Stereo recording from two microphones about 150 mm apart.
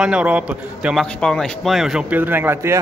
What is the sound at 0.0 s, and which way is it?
A man's voice, 10° right (ahead or behind).